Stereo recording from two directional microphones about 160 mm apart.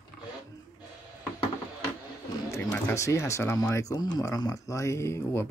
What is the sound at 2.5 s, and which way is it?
Speech, 15° left (ahead or behind).